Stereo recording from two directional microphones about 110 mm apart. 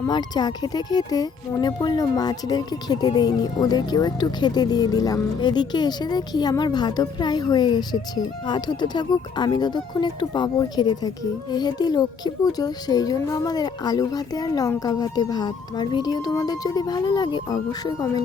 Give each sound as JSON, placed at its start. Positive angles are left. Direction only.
{"t": 0.1, "sound": "speech", "side_deg": 40}